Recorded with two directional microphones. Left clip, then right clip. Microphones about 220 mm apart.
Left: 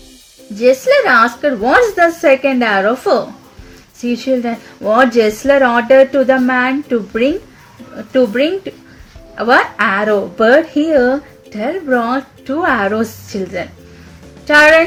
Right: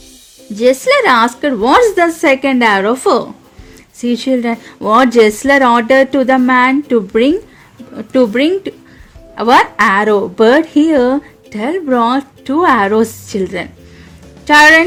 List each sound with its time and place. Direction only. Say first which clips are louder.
0.5 s a woman's voice: even; 50° right (ahead or behind)